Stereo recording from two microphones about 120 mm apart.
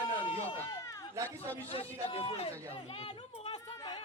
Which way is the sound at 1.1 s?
25° right (ahead or behind).